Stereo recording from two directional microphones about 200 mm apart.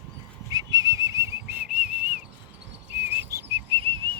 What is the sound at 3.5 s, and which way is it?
Whistling, 25° right (ahead or behind).